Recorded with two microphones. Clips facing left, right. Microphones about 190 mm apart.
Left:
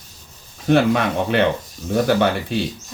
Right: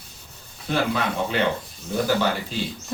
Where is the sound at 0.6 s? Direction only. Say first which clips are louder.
Left 8 dB; 75° left (ahead or behind).